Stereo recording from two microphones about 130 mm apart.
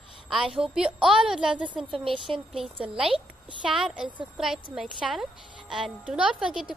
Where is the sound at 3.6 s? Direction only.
5° right (ahead or behind).